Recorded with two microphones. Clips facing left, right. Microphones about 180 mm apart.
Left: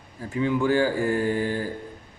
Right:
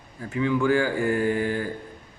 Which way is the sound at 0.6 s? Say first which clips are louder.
Left 1 dB; 35° left (ahead or behind).